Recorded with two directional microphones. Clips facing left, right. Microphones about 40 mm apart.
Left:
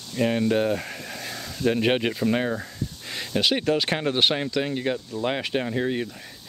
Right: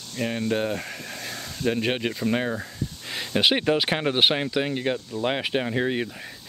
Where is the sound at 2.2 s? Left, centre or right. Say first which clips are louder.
Left 1 dB; centre.